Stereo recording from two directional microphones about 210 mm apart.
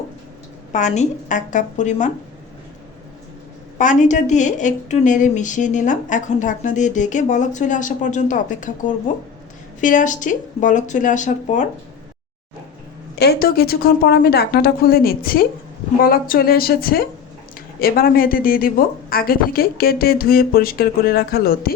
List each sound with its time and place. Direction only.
0.7 s a woman's voice: 35° left (ahead or behind)
3.8 s a woman's voice: 35° left (ahead or behind)
13.1 s speech: 50° left (ahead or behind)